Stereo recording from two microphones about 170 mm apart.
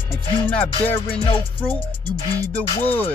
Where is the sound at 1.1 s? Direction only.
30° left (ahead or behind).